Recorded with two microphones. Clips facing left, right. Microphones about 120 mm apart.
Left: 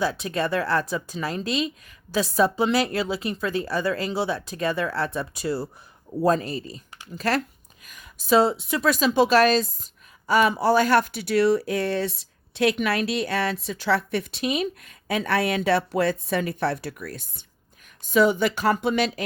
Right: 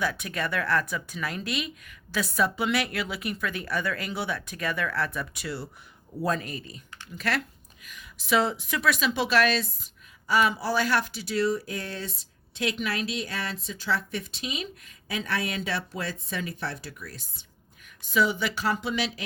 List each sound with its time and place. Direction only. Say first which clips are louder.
0.0 s a woman's voice: left 5 dB; 30° left (ahead or behind); by 19.2 s 50° left (ahead or behind)